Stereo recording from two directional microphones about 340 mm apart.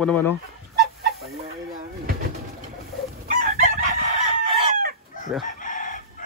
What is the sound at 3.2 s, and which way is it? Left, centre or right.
Chicken, right.